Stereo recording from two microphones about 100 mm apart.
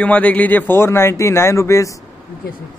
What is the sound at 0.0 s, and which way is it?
Speech, 15° left (ahead or behind).